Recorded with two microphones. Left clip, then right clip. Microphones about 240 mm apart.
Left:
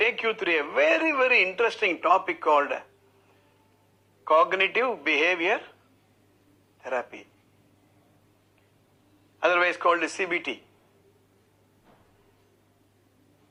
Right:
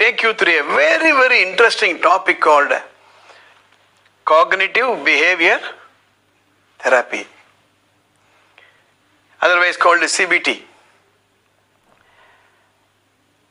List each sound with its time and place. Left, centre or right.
0.0 s a man's voice: right
4.2 s a man's voice: right
9.4 s a man's voice: right